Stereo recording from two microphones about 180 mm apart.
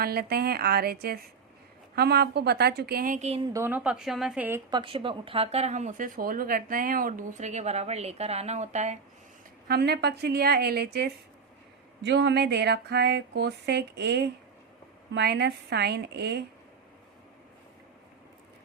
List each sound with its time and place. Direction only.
0.0 s a woman's voice: 60° right (ahead or behind); by 3.4 s 40° right (ahead or behind)
3.4 s a woman's voice: 15° right (ahead or behind)
4.7 s speech: 30° right (ahead or behind)
9.6 s a woman's voice: 65° right (ahead or behind)
12.0 s a sound: 75° right (ahead or behind)